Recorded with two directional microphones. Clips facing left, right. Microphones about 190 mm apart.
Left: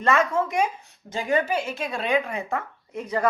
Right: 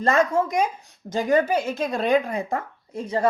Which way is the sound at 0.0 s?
35° right (ahead or behind).